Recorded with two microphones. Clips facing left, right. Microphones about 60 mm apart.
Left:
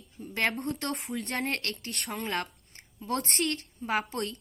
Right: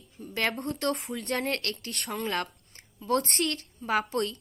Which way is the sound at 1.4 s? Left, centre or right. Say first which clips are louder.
Even; centre.